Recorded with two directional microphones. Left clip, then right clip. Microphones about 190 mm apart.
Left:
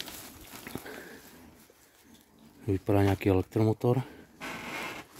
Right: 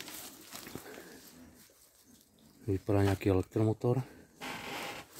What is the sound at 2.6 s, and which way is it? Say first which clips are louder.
Speech: left 4 dB; 15° left (ahead or behind).